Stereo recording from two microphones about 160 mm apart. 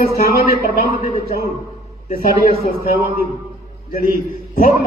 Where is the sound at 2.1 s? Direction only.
65° left (ahead or behind).